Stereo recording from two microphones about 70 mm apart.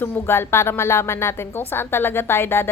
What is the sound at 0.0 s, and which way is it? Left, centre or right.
A woman's voice, left.